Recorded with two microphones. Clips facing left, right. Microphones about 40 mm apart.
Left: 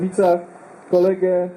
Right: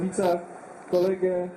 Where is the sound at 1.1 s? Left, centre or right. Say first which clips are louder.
Left 7 dB; left.